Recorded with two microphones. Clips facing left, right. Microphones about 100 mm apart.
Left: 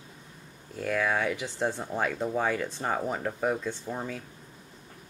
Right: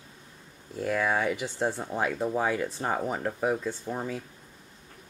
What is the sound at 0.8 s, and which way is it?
Speech, 5° right (ahead or behind).